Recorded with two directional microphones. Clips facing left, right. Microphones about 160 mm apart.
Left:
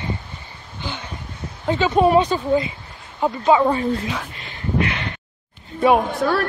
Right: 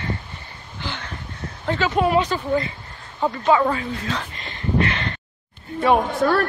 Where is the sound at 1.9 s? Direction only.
30° left (ahead or behind).